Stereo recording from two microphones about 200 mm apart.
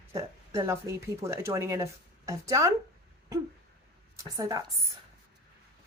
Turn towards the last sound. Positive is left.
turn(degrees=-15)  # may be behind; listen again after turning